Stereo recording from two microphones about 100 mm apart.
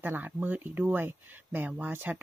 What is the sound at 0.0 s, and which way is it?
Speech, 20° right (ahead or behind).